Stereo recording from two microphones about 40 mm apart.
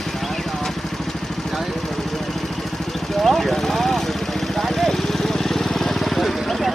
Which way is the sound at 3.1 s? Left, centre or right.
Centre.